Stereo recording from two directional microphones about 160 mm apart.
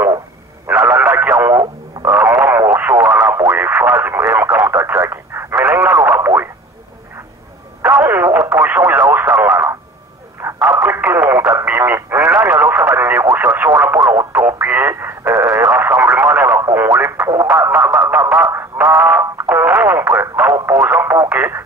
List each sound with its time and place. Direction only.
0.7 s radio: 15° right (ahead or behind)
3.3 s radio: 15° right (ahead or behind)
7.8 s radio: 15° right (ahead or behind)
9.4 s a sound: 15° right (ahead or behind)
10.6 s radio: 5° right (ahead or behind)
10.9 s radio: 15° right (ahead or behind)
18.0 s a sound: 15° right (ahead or behind)
18.9 s music: 15° right (ahead or behind)
19.5 s radio: 15° right (ahead or behind)